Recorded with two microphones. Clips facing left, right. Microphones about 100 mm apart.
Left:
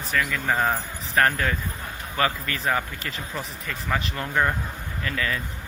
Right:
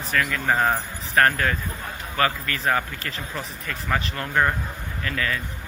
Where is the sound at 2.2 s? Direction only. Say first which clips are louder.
Right 1 dB; 20° left (ahead or behind).